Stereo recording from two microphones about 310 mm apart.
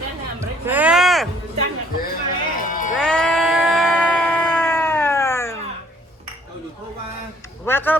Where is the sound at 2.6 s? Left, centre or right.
Left.